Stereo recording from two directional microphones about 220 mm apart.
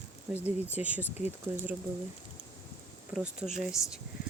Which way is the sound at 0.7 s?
5° right (ahead or behind).